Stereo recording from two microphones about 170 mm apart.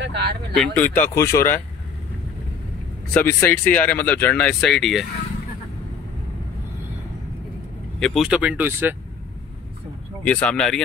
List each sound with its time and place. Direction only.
0.1 s speech: 75° right (ahead or behind)
0.6 s speech: 10° left (ahead or behind)
3.1 s speech: 15° left (ahead or behind)
8.0 s speech: centre (ahead or behind)
10.2 s speech: 5° left (ahead or behind)